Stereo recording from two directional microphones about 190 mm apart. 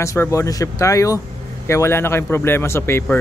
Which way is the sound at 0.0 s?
15° left (ahead or behind).